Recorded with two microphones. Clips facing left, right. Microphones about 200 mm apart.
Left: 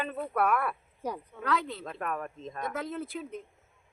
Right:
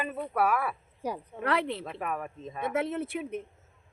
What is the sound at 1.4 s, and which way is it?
Speech, 25° right (ahead or behind).